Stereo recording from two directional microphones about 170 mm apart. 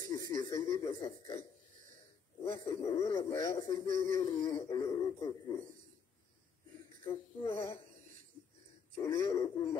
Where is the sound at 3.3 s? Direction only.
20° left (ahead or behind).